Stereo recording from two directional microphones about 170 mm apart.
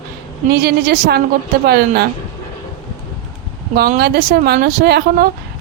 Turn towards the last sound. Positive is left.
turn(degrees=-65)  # may be behind; listen again after turning